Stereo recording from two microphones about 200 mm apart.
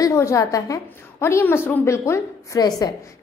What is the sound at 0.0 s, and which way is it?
A woman's voice, 15° left (ahead or behind).